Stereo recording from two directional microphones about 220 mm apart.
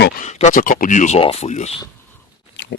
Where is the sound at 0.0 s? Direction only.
35° left (ahead or behind).